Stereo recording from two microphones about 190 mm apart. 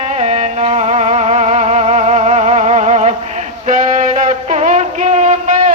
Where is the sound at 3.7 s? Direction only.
40° right (ahead or behind).